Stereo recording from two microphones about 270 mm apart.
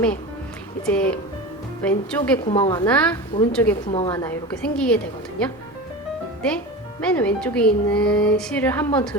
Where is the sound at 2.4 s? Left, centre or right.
Centre.